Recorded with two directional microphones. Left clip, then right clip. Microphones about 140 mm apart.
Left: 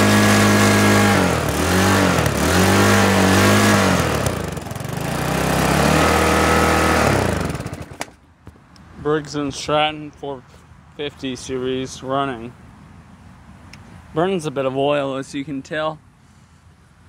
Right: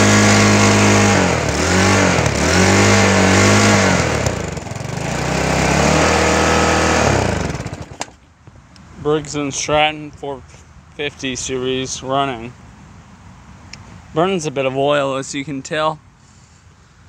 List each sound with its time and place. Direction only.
0.0 s vehicle: centre (ahead or behind)
9.0 s speech: 10° right (ahead or behind)
13.7 s speech: 10° right (ahead or behind)